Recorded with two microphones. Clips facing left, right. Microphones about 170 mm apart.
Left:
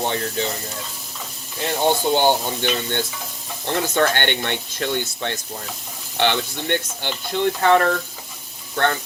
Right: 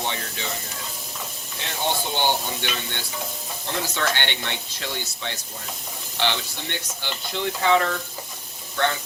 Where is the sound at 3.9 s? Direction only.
55° left (ahead or behind).